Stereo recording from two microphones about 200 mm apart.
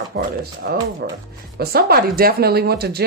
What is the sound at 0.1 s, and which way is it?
Speech, 50° right (ahead or behind).